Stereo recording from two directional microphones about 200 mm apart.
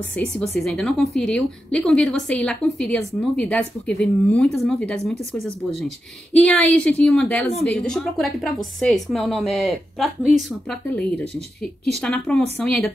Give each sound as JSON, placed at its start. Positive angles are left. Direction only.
{"t": 0.1, "sound": "a woman's voice", "side_deg": 5}